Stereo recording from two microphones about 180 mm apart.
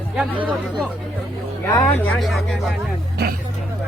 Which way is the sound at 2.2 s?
Centre (ahead or behind).